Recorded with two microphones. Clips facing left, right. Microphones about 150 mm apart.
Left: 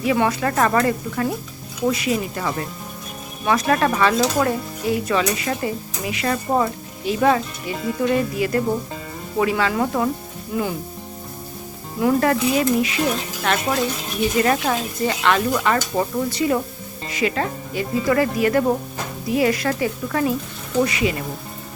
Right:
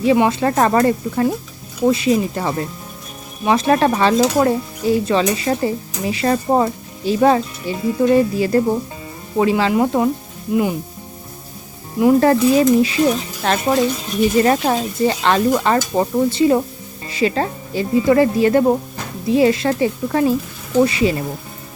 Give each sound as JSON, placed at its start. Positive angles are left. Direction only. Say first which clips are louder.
{"t": 0.0, "sound": "speech", "louder": "right 5 dB", "side_deg": -25}
{"t": 1.9, "sound": "stir", "louder": "right 6 dB", "side_deg": -30}
{"t": 9.4, "sound": "speech", "louder": "right 5 dB", "side_deg": -30}
{"t": 11.9, "sound": "stir", "louder": "right 6 dB", "side_deg": -25}
{"t": 17.1, "sound": "speech", "louder": "right 4 dB", "side_deg": -30}
{"t": 20.8, "sound": "stir", "louder": "right 5 dB", "side_deg": -30}